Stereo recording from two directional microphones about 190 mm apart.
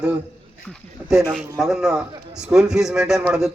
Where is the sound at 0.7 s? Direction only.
Centre (ahead or behind).